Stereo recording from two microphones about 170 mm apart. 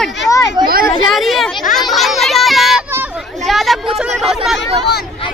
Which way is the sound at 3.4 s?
Centre (ahead or behind).